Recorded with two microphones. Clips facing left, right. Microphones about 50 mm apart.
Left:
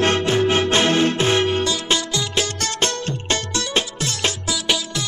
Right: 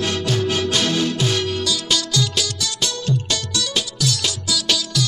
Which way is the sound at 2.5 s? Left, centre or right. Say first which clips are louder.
Left 3 dB; left.